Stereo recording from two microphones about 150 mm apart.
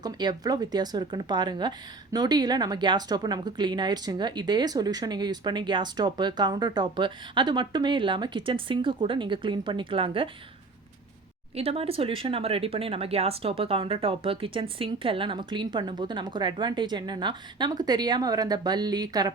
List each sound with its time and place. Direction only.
0.0 s speech: 25° right (ahead or behind)
11.5 s speech: 40° right (ahead or behind)